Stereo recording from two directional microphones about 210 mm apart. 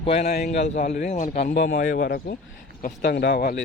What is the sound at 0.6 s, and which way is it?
Speech, 35° left (ahead or behind).